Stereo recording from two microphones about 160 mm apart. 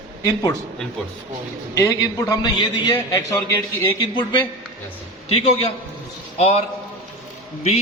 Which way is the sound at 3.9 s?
30° left (ahead or behind).